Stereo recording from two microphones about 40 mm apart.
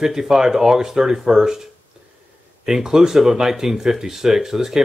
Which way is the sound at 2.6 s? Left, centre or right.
Centre.